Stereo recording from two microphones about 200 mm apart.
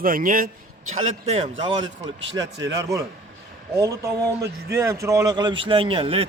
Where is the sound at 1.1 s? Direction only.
30° right (ahead or behind).